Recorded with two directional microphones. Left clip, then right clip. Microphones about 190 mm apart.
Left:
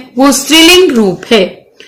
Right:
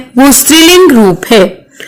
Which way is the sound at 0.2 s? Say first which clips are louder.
Right 1 dB; 45° right (ahead or behind).